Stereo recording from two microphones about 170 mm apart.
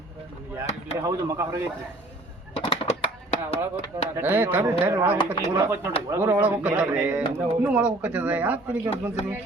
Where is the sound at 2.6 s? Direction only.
30° left (ahead or behind).